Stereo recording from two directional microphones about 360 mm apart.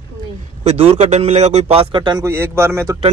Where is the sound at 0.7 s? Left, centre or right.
Centre.